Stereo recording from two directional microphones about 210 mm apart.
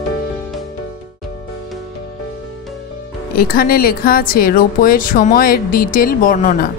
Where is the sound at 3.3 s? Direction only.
45° left (ahead or behind).